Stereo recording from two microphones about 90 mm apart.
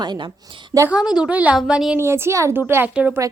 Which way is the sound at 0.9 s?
5° right (ahead or behind).